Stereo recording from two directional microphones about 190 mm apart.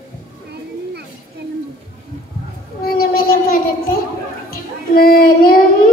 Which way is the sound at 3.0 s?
50° left (ahead or behind).